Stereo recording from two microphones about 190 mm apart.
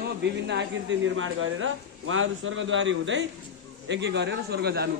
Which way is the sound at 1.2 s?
90° right.